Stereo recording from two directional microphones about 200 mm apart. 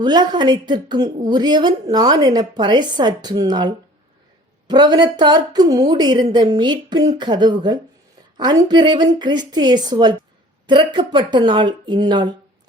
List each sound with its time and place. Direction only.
0.0 s a woman's voice: 20° right (ahead or behind)
4.7 s a woman's voice: 20° right (ahead or behind)